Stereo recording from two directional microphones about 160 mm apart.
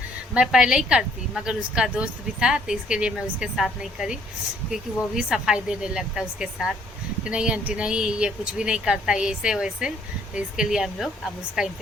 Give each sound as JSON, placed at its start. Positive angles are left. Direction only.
{"t": 0.3, "sound": "a woman's voice", "side_deg": -5}